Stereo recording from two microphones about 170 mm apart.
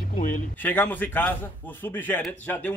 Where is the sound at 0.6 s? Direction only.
10° left (ahead or behind).